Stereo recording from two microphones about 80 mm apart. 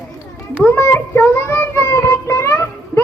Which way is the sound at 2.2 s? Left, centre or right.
Left.